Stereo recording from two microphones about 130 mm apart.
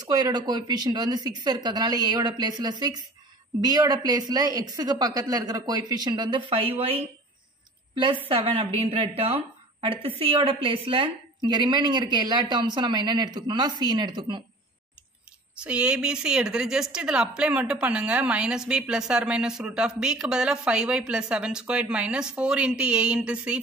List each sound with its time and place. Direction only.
0.0 s a woman's voice: 30° right (ahead or behind)
7.9 s a woman's voice: 40° right (ahead or behind)
15.5 s a woman's voice: 10° right (ahead or behind)